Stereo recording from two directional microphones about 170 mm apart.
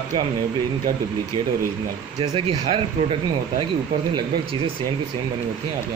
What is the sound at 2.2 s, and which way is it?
Speech, 30° right (ahead or behind).